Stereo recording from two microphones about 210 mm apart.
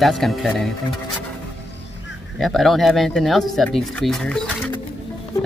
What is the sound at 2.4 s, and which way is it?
Speech, centre (ahead or behind).